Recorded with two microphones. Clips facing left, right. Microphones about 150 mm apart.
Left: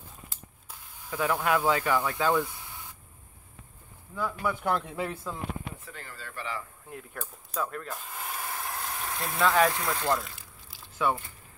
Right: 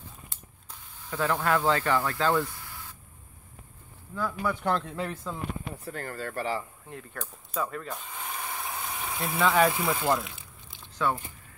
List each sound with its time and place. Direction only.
0.3 s a sound: 10° left (ahead or behind)
4.1 s speech: 5° left (ahead or behind)
5.9 s speech: 50° right (ahead or behind)
6.9 s mechanisms: 5° left (ahead or behind)